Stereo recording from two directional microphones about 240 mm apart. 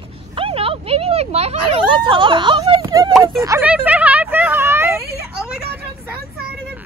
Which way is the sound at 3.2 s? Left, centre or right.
Centre.